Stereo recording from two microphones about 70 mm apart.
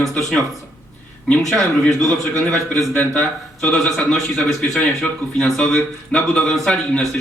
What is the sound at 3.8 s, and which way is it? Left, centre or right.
A man's voice, centre.